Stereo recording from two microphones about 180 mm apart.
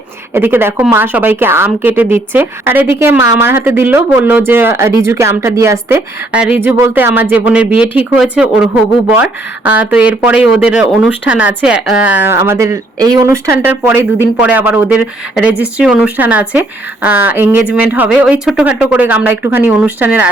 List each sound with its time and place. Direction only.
0.3 s a woman's voice: 10° right (ahead or behind)